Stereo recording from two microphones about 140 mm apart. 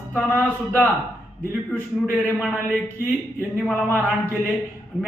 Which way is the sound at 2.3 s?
5° right (ahead or behind).